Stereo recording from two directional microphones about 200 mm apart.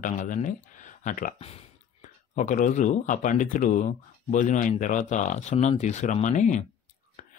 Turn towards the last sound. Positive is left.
turn(degrees=40)  # may be behind; listen again after turning